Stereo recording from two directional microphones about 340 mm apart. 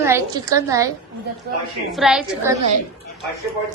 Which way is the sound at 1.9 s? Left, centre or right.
Centre.